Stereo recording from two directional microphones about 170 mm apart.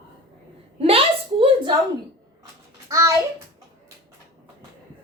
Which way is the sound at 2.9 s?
20° right (ahead or behind).